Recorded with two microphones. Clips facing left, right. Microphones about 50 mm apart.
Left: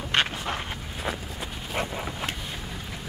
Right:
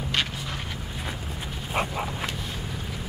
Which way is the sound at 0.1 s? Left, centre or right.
Left.